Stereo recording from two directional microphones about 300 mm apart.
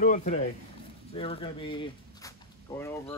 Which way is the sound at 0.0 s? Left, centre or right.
Left.